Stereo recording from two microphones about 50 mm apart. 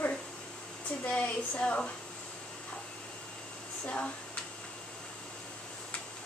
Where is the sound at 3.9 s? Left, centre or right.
Left.